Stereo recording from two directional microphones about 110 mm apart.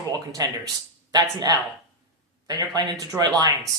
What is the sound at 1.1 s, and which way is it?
Speech, 35° right (ahead or behind).